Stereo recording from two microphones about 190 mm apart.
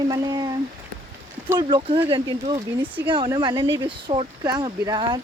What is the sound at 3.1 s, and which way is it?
Speech, 25° right (ahead or behind).